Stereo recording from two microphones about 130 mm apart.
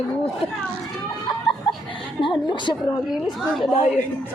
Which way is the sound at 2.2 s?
35° left (ahead or behind).